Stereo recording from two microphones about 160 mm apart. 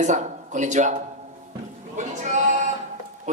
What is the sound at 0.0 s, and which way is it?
Speech, 50° right (ahead or behind).